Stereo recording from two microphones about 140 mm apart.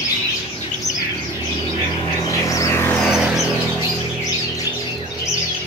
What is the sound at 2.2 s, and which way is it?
Vehicle, 25° left (ahead or behind).